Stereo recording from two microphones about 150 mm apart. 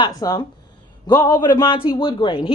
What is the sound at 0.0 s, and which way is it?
A woman's voice, 25° left (ahead or behind).